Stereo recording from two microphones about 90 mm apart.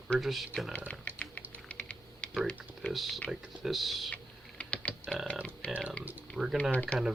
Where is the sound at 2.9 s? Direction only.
Centre (ahead or behind).